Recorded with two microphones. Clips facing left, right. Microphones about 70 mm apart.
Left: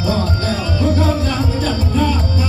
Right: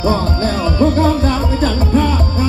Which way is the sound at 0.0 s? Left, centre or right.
Right.